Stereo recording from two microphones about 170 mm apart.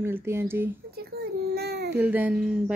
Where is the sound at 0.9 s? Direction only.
70° right (ahead or behind).